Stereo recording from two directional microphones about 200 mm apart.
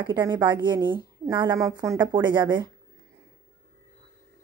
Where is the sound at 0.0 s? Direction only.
20° right (ahead or behind).